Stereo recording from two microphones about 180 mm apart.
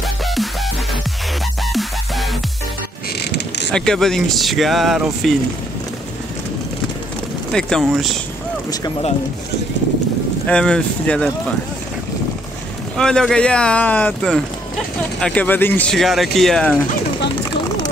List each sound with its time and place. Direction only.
1.7 s music: centre (ahead or behind)
3.3 s mechanisms: 70° left (ahead or behind)
3.7 s speech: 5° left (ahead or behind)
7.5 s speech: centre (ahead or behind)
10.4 s speech: 5° left (ahead or behind)
12.9 s speech: 5° left (ahead or behind)